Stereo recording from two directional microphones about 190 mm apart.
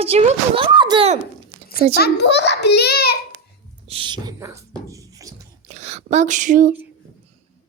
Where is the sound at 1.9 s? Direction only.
60° left (ahead or behind).